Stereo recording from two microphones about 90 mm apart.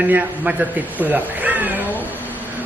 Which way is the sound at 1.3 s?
20° right (ahead or behind).